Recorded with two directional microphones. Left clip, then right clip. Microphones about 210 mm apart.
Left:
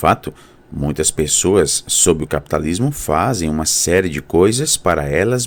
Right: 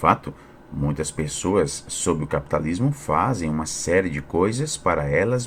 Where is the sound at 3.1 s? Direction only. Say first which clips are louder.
Left 5 dB; 75° left (ahead or behind); by 4.7 s 50° left (ahead or behind).